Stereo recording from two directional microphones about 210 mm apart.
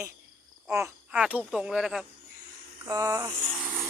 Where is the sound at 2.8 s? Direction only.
15° right (ahead or behind).